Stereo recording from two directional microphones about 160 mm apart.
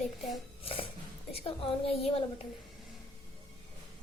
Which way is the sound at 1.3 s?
35° left (ahead or behind).